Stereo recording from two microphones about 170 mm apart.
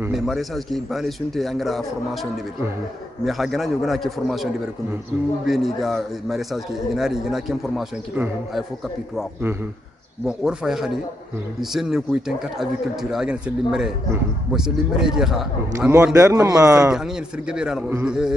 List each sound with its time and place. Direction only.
0.1 s a man's voice: centre (ahead or behind)
3.3 s a man's voice: centre (ahead or behind)
10.2 s a man's voice: 5° right (ahead or behind)
16.1 s a man's voice: 20° right (ahead or behind)
16.9 s a man's voice: 5° right (ahead or behind)